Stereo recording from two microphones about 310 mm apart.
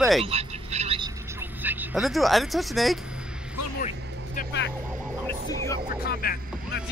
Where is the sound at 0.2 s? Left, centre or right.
Centre.